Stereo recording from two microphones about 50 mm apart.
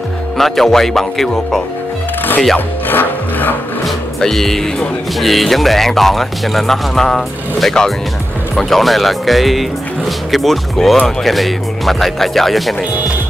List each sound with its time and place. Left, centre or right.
0.4 s speech: centre
2.9 s rub: left
4.2 s speech: centre